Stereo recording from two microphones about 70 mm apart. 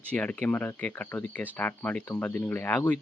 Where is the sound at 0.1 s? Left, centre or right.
Centre.